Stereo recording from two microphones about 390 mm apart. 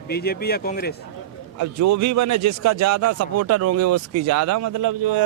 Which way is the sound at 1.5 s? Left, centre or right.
Right.